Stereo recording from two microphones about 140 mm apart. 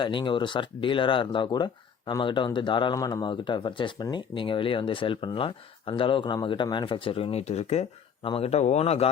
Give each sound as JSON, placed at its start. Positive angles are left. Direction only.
{"t": 0.0, "sound": "speech", "side_deg": 35}